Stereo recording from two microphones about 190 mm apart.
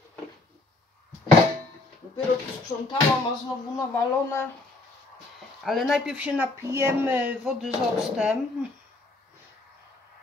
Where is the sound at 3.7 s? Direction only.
15° left (ahead or behind).